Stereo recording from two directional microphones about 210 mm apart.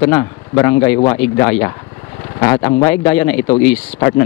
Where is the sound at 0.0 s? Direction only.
15° left (ahead or behind).